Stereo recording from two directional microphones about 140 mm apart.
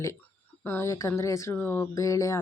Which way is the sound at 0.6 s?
15° left (ahead or behind).